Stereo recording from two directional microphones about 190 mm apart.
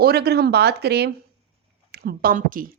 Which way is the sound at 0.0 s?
55° right (ahead or behind).